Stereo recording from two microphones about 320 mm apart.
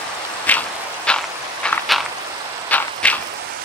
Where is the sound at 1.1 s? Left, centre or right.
Centre.